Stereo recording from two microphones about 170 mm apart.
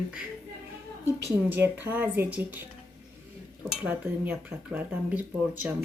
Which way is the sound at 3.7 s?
10° right (ahead or behind).